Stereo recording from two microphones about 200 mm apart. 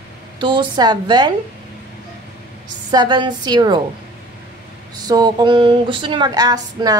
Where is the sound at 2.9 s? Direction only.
20° right (ahead or behind).